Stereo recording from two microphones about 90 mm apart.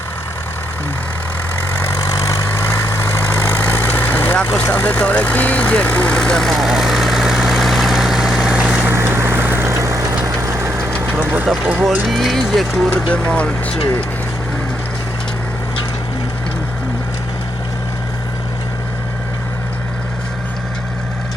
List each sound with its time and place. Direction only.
2.0 s vehicle: 40° left (ahead or behind)
2.6 s vehicle: 25° left (ahead or behind); by 8.9 s 10° right (ahead or behind)
8.9 s vehicle: 25° right (ahead or behind)
9.6 s vehicle: 35° right (ahead or behind); by 11.4 s 20° right (ahead or behind)
11.4 s speech: 5° right (ahead or behind)
13.1 s speech: 10° left (ahead or behind)